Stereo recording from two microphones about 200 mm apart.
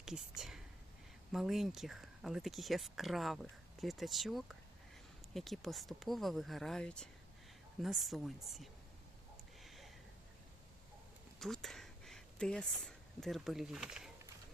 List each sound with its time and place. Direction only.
0.0 s speech: 5° right (ahead or behind)
9.6 s a sound: centre (ahead or behind)
11.3 s speech: centre (ahead or behind)